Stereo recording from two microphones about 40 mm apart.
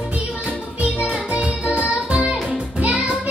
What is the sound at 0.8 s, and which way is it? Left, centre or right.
Music, right.